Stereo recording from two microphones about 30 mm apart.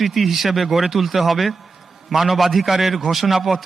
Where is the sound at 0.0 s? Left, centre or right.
Centre.